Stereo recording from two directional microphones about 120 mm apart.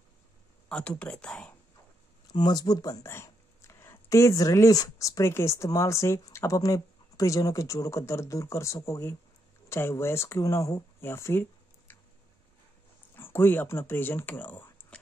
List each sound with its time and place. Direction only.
0.7 s speech: 10° left (ahead or behind)
2.2 s speech: 35° left (ahead or behind)
13.1 s speech: 20° left (ahead or behind)